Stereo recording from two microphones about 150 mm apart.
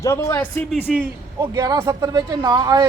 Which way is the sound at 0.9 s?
Centre (ahead or behind).